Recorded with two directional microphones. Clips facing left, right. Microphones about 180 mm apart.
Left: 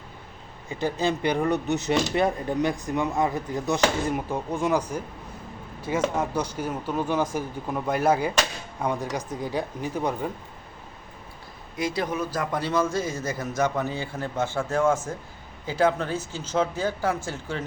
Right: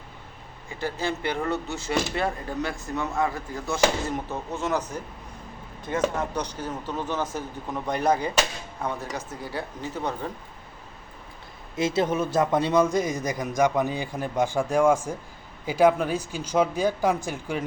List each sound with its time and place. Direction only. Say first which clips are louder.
0.7 s speech: left 4 dB; 20° left (ahead or behind)
6.1 s speech: left 2 dB; 10° left (ahead or behind)
11.8 s a man's voice: right 3 dB; 25° right (ahead or behind)